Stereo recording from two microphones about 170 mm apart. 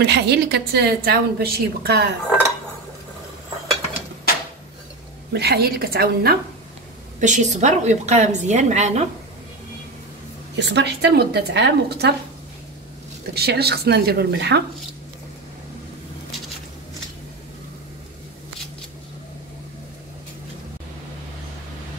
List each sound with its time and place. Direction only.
0.0 s a woman's voice: 80° right
5.3 s a woman's voice: 70° right (ahead or behind)
7.2 s a woman's voice: 45° right (ahead or behind)
10.5 s a woman's voice: 90° right; by 12.1 s 75° right (ahead or behind)
13.3 s a woman's voice: 70° right (ahead or behind)